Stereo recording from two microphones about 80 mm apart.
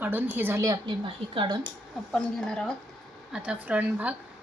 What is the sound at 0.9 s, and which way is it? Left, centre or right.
Speech, right.